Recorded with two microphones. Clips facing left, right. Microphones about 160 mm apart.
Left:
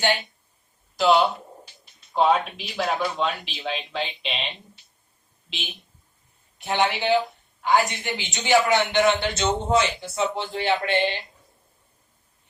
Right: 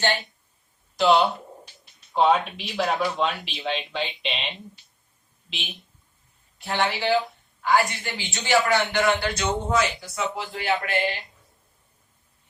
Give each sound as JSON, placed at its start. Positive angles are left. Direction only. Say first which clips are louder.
{"t": 0.9, "sound": "speech", "louder": "even", "side_deg": 0}
{"t": 5.5, "sound": "speech", "louder": "left 1 dB", "side_deg": 0}
{"t": 6.6, "sound": "a man's voice", "louder": "left 2 dB", "side_deg": 20}